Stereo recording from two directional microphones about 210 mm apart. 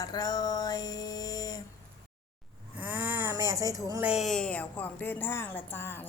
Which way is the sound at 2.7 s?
10° right (ahead or behind).